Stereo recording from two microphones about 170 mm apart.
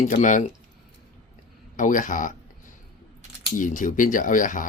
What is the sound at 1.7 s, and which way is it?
Speech, 50° left (ahead or behind).